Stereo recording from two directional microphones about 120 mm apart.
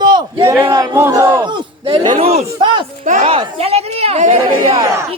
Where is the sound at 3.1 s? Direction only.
90° right.